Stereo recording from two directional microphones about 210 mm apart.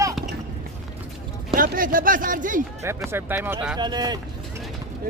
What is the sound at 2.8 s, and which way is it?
Speech, 10° right (ahead or behind).